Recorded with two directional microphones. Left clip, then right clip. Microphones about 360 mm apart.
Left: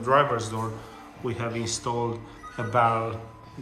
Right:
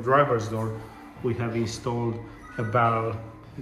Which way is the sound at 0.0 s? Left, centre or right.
Centre.